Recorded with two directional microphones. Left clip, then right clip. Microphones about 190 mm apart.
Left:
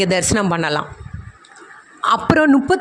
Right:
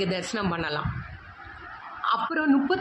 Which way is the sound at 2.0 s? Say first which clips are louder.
Left 11 dB; 55° left (ahead or behind).